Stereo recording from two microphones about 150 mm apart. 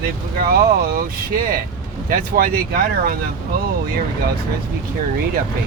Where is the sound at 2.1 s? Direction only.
70° right (ahead or behind).